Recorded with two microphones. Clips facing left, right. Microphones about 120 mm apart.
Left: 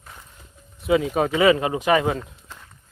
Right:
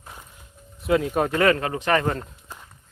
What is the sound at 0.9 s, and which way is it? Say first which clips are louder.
Speech: left 1 dB; centre (ahead or behind).